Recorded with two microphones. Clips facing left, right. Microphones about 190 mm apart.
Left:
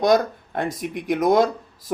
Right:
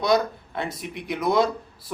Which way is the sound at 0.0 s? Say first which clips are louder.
Left 4 dB; 45° left (ahead or behind).